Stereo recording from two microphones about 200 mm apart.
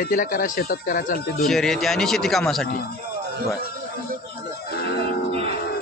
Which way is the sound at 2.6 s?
50° left (ahead or behind).